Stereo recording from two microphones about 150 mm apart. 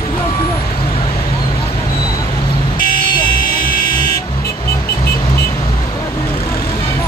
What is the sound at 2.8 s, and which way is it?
Buzzer, 70° left (ahead or behind).